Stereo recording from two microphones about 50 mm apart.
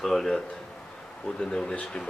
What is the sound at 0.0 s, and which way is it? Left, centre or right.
Speech, centre.